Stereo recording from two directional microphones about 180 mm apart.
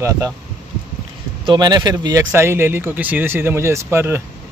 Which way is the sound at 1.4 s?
25° right (ahead or behind).